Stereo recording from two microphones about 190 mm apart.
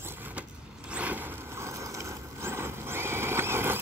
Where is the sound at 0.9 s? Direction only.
10° right (ahead or behind).